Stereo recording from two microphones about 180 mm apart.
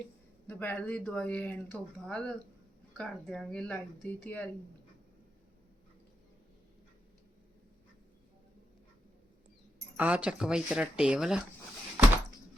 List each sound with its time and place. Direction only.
0.4 s speech: 10° left (ahead or behind)
10.0 s speech: 5° right (ahead or behind)